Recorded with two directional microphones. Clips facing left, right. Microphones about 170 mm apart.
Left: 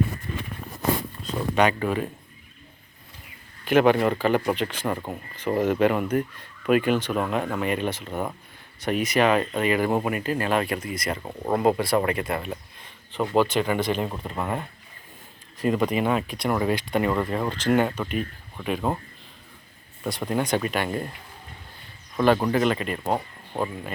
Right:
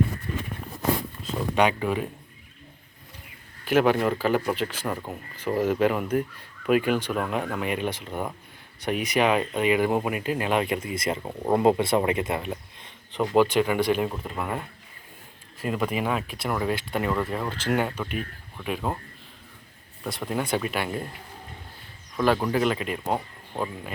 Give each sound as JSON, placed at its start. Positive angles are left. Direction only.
{"t": 1.4, "sound": "speech", "side_deg": -10}
{"t": 3.7, "sound": "speech", "side_deg": -5}
{"t": 5.5, "sound": "speech", "side_deg": 5}
{"t": 5.8, "sound": "speech", "side_deg": -5}
{"t": 7.1, "sound": "speech", "side_deg": 20}
{"t": 7.3, "sound": "speech", "side_deg": -5}
{"t": 10.9, "sound": "speech", "side_deg": -25}
{"t": 11.2, "sound": "speech", "side_deg": -10}
{"t": 11.8, "sound": "speech", "side_deg": -20}
{"t": 14.3, "sound": "speech", "side_deg": 5}
{"t": 15.6, "sound": "speech", "side_deg": -5}
{"t": 20.1, "sound": "speech", "side_deg": 0}
{"t": 22.2, "sound": "speech", "side_deg": 0}